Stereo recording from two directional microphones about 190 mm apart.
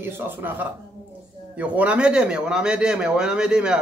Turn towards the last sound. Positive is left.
turn(degrees=-5)  # may be behind; listen again after turning